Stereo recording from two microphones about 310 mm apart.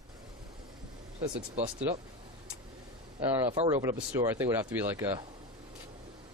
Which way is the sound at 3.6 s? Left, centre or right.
Centre.